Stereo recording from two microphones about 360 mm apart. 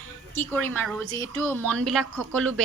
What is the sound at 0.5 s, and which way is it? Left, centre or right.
Speech, right.